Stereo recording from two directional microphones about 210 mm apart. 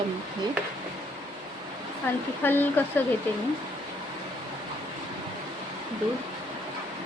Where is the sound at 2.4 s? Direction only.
10° left (ahead or behind).